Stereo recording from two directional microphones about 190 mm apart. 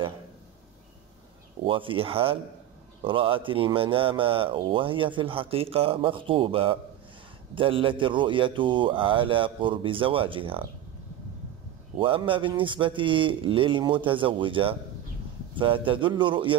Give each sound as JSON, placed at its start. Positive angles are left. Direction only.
{"t": 1.6, "sound": "speech", "side_deg": -25}
{"t": 12.0, "sound": "speech", "side_deg": -25}